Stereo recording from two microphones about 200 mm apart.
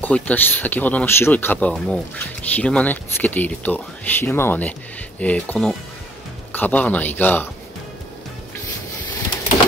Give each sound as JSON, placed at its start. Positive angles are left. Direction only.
{"t": 0.0, "sound": "speech", "side_deg": 10}